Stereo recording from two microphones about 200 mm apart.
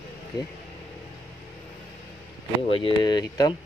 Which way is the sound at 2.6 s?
25° left (ahead or behind).